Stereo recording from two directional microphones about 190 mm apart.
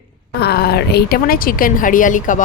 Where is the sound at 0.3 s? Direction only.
55° left (ahead or behind).